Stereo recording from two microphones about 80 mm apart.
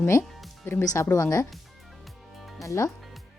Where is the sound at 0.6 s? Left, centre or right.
Left.